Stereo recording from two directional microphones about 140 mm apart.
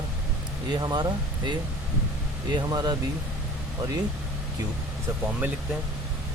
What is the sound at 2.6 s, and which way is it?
Speech, 30° right (ahead or behind).